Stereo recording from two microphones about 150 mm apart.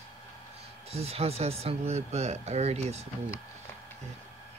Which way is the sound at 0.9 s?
40° right (ahead or behind).